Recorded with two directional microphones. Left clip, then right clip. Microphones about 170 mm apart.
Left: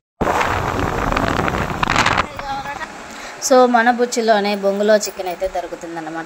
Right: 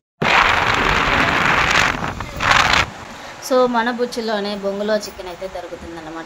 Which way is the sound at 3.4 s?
20° left (ahead or behind).